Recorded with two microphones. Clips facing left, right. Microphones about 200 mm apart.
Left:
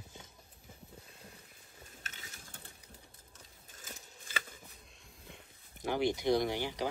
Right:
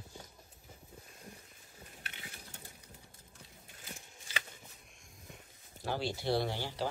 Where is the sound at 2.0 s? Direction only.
40° left (ahead or behind).